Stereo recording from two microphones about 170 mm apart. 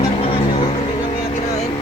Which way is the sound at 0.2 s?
35° left (ahead or behind).